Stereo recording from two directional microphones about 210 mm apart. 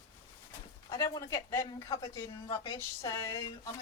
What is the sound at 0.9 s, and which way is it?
Speech, 15° left (ahead or behind).